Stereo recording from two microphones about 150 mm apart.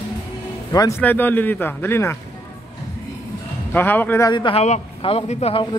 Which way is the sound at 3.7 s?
10° left (ahead or behind).